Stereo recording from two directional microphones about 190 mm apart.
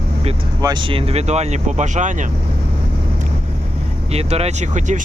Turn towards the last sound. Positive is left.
turn(degrees=-40)  # may be behind; listen again after turning